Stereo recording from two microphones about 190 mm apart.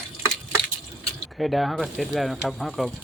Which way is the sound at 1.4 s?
Centre (ahead or behind).